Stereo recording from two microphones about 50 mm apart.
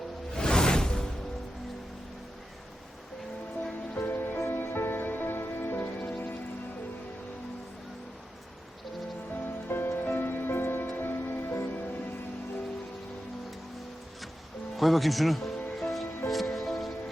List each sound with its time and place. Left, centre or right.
0.3 s music: centre
3.9 s music: left
9.3 s music: left
14.8 s speech: centre
15.8 s music: centre